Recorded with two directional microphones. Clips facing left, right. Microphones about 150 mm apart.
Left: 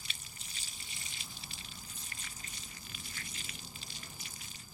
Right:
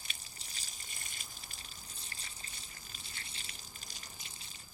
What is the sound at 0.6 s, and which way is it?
Water, 45° right (ahead or behind).